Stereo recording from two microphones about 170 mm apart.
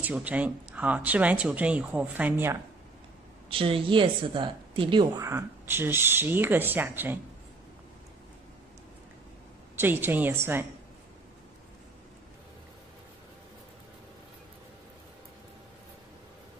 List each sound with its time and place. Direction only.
0.0 s speech: 10° right (ahead or behind)
3.4 s a woman's voice: 30° right (ahead or behind)
5.2 s speech: 15° right (ahead or behind)
9.8 s speech: 10° right (ahead or behind)